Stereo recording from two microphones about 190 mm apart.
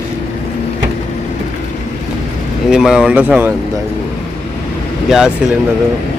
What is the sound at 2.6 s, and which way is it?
Speech, 5° right (ahead or behind).